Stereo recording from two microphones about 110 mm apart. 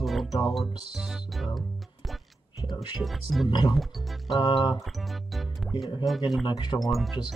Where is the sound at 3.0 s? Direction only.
Centre (ahead or behind).